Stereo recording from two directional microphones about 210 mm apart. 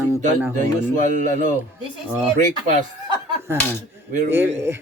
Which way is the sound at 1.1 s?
35° right (ahead or behind).